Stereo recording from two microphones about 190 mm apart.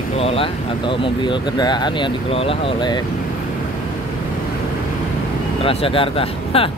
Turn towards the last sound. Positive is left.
turn(degrees=30)  # may be behind; listen again after turning